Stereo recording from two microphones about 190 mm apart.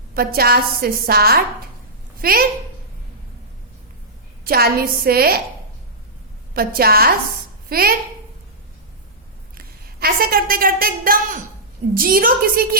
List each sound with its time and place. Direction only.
0.1 s a woman's voice: 50° right (ahead or behind)
4.4 s a woman's voice: 55° right (ahead or behind)
6.5 s a woman's voice: 50° right (ahead or behind)
9.6 s a woman's voice: 50° right (ahead or behind)